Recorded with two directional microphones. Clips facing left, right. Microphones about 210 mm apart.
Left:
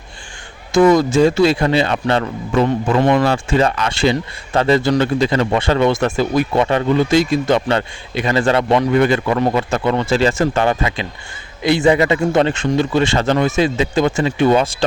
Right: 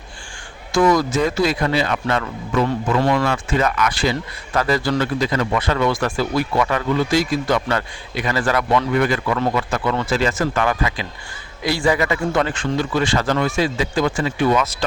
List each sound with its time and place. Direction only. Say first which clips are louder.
0.7 s speech: left 5 dB; 25° left (ahead or behind)